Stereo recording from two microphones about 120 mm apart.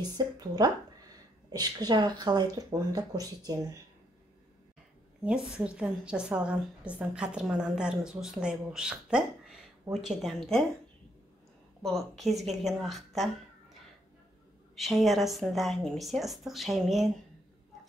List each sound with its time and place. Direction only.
0.2 s speech: 35° right (ahead or behind)
1.5 s speech: 35° right (ahead or behind)
5.2 s a woman's voice: 5° right (ahead or behind)
11.8 s speech: centre (ahead or behind)
14.8 s speech: centre (ahead or behind)